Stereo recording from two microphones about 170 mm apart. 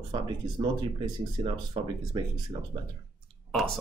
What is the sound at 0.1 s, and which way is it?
Speech, 30° right (ahead or behind).